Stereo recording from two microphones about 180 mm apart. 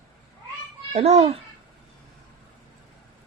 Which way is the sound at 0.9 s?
35° right (ahead or behind).